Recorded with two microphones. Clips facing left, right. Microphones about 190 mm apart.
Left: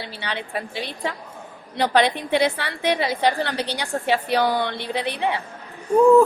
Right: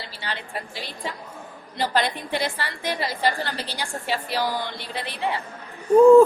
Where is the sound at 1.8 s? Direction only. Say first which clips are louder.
Left 5 dB; 65° left (ahead or behind).